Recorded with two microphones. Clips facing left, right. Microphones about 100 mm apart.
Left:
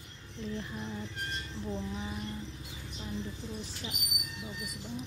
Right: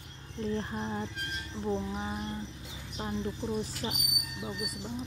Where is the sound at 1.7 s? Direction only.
35° right (ahead or behind).